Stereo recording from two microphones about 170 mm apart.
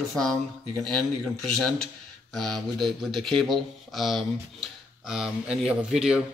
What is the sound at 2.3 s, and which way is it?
Speech, centre (ahead or behind).